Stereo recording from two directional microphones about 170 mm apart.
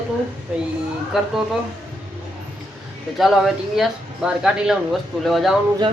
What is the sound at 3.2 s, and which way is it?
Speech, centre (ahead or behind).